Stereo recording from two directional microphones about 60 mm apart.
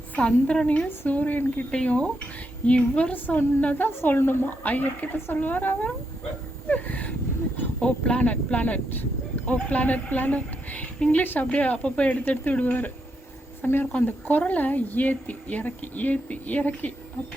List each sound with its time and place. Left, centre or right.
0.2 s a woman's voice: centre
0.9 s speech: left
1.7 s a woman's voice: centre
6.7 s a sound: left
7.8 s speech: centre
13.6 s speech: left